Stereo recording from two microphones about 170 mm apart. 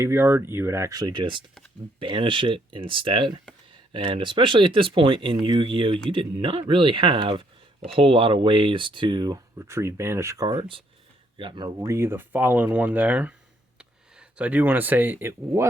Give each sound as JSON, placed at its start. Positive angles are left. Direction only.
{"t": 0.0, "sound": "speech", "side_deg": -15}
{"t": 11.9, "sound": "speech", "side_deg": -15}